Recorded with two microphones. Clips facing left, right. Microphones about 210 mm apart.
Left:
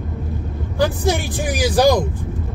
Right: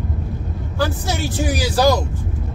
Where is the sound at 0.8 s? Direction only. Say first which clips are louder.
Left 4 dB; 15° left (ahead or behind).